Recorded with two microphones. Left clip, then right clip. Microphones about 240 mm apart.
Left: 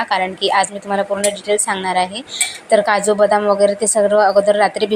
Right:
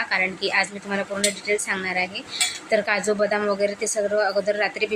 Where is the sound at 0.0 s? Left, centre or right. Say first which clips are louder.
Left 6 dB; centre.